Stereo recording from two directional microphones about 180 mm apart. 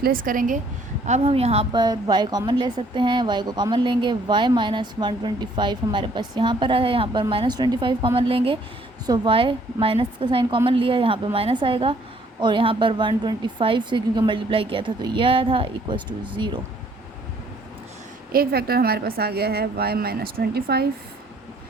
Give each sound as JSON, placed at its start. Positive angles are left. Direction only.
{"t": 0.0, "sound": "speech", "side_deg": -50}
{"t": 1.0, "sound": "a woman's voice", "side_deg": -35}
{"t": 18.3, "sound": "a woman's voice", "side_deg": -55}